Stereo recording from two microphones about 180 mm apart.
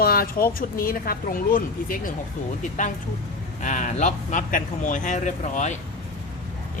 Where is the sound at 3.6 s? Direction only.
45° left (ahead or behind).